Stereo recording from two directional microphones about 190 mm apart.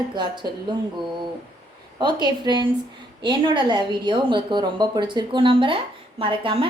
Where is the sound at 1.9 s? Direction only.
20° right (ahead or behind).